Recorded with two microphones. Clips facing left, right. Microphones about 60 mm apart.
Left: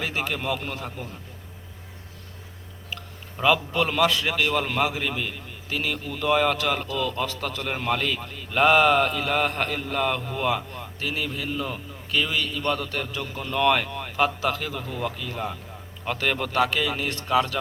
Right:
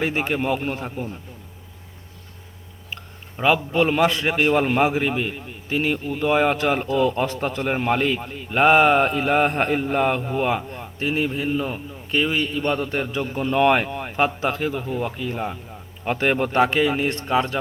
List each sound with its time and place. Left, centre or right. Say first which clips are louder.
0.0 s a man's voice: right 5 dB; right
3.3 s a man's voice: right 3 dB; centre